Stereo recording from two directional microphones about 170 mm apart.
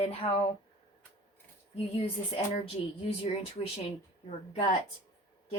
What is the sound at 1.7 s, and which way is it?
Speech, 35° left (ahead or behind).